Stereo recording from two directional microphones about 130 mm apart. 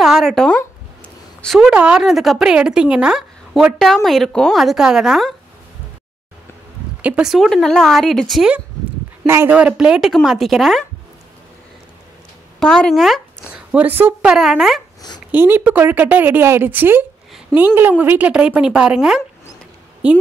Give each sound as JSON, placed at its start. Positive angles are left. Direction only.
{"t": 0.0, "sound": "a woman's voice", "side_deg": 0}
{"t": 7.0, "sound": "a woman's voice", "side_deg": -10}
{"t": 9.2, "sound": "a woman's voice", "side_deg": -20}
{"t": 9.6, "sound": "a woman's voice", "side_deg": -10}
{"t": 12.5, "sound": "a woman's voice", "side_deg": 5}
{"t": 13.5, "sound": "a woman's voice", "side_deg": -10}
{"t": 14.3, "sound": "a woman's voice", "side_deg": -5}
{"t": 15.3, "sound": "a woman's voice", "side_deg": -15}